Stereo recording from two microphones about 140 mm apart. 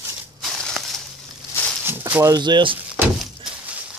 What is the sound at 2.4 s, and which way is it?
Speech, 35° right (ahead or behind).